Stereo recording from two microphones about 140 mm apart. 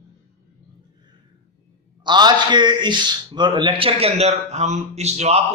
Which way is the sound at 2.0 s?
30° right (ahead or behind).